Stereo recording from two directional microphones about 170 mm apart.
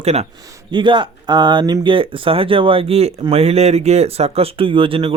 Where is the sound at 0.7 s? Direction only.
30° right (ahead or behind).